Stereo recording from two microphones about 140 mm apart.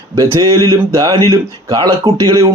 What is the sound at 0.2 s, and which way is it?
Speech, 25° right (ahead or behind).